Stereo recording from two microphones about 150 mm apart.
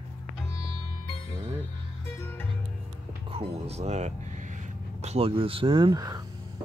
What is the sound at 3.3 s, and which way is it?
Speech, 40° right (ahead or behind).